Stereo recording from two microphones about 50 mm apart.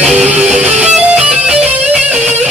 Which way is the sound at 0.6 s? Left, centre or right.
Right.